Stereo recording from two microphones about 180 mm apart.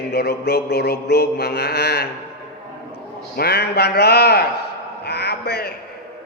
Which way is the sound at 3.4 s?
60° left (ahead or behind).